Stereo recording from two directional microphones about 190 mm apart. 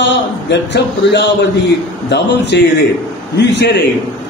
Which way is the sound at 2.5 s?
65° left (ahead or behind).